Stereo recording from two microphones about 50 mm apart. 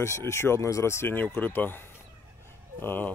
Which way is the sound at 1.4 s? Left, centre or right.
Left.